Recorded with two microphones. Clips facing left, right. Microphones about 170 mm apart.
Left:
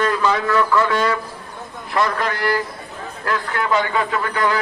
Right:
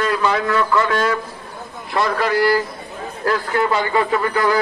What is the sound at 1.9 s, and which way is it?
Speech, 30° right (ahead or behind).